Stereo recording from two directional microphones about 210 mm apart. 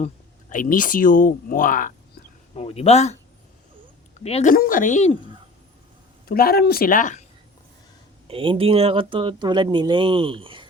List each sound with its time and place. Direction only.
0.5 s speech: 40° left (ahead or behind)
2.6 s a man's voice: 30° left (ahead or behind)
4.2 s a man's voice: 30° left (ahead or behind)
4.5 s speech: 40° left (ahead or behind)
6.2 s speech: 45° left (ahead or behind)
8.3 s speech: 25° right (ahead or behind)